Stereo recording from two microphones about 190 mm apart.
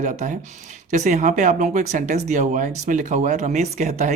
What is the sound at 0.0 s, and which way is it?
Speech, 40° right (ahead or behind).